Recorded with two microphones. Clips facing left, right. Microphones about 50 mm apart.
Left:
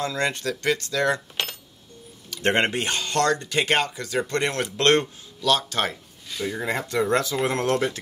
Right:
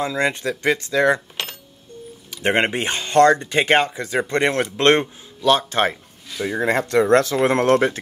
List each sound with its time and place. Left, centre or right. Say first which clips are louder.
0.0 s speech: right 4 dB; centre
6.4 s speech: right 7 dB; right